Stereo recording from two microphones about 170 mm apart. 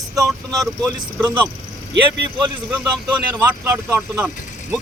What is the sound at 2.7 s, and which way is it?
Speech, 5° right (ahead or behind).